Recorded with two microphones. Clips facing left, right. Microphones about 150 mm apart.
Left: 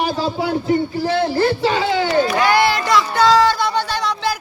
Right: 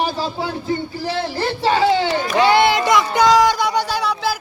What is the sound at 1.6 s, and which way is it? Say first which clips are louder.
Crowd: right 2 dB; 35° right (ahead or behind).